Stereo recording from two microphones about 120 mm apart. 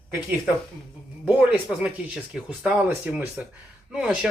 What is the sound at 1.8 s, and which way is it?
Speech, 5° right (ahead or behind).